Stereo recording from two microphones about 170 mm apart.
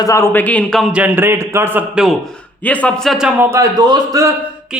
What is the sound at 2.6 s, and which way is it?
Speech, 10° left (ahead or behind).